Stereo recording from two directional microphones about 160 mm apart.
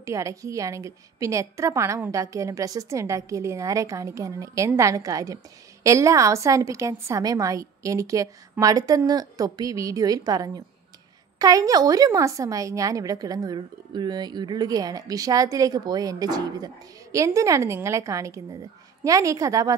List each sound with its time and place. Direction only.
0.0 s a woman's voice: 20° right (ahead or behind)